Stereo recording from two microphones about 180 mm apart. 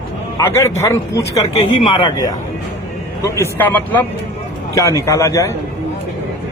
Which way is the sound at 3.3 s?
15° left (ahead or behind).